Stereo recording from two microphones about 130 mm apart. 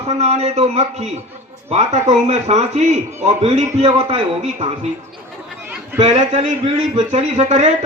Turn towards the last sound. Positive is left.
turn(degrees=-60)  # may be behind; listen again after turning